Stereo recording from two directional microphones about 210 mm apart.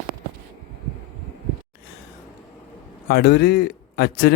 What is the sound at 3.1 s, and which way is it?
Speech, 50° left (ahead or behind).